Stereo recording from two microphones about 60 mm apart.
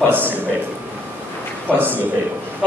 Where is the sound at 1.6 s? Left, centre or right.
Right.